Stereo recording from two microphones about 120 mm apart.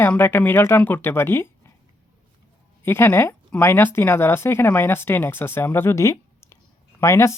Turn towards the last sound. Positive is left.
turn(degrees=25)  # may be behind; listen again after turning